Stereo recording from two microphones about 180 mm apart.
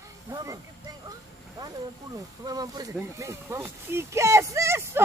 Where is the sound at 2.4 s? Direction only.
20° right (ahead or behind).